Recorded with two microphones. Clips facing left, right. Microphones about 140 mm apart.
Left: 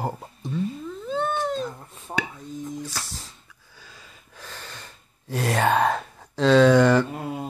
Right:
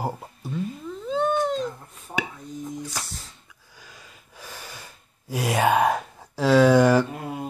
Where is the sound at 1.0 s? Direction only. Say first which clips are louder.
Right 3 dB; 15° right (ahead or behind).